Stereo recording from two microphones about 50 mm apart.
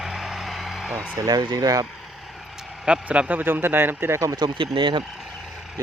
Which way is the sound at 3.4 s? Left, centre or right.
Right.